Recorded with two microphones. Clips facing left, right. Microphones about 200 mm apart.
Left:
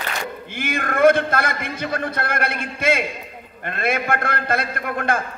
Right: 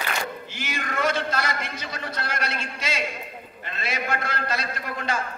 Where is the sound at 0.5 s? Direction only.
55° left (ahead or behind).